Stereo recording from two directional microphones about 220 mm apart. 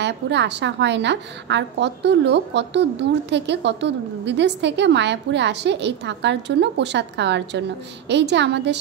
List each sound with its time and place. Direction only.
0.0 s a woman's voice: 50° right (ahead or behind)